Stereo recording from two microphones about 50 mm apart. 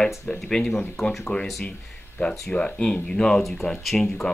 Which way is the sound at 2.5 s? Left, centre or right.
Left.